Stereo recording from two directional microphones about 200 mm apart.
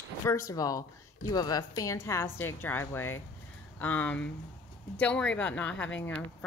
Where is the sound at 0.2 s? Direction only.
15° left (ahead or behind).